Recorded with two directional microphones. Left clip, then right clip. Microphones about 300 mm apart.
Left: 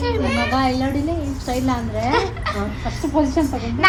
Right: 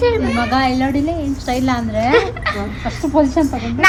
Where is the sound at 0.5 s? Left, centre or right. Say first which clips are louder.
Right 5 dB; right.